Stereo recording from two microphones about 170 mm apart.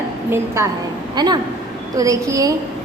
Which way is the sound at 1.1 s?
25° right (ahead or behind).